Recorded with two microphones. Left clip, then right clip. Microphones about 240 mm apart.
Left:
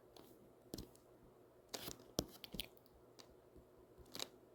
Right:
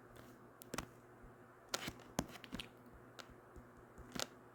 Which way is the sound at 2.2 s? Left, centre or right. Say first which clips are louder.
Even; centre.